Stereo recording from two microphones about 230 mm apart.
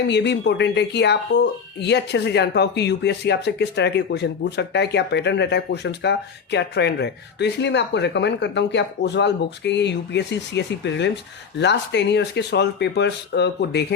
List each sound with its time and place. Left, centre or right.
0.1 s speech: left